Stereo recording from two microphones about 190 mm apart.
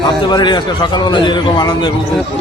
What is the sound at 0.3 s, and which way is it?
A man's voice, 25° left (ahead or behind).